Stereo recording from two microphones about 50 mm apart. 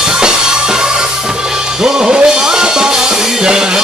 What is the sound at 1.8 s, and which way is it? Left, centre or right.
Music, centre.